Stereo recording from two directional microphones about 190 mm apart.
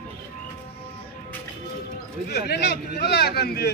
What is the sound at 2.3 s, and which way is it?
Speech, 60° left (ahead or behind).